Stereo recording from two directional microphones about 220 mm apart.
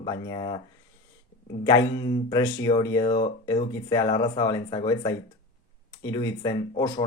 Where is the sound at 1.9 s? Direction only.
20° left (ahead or behind).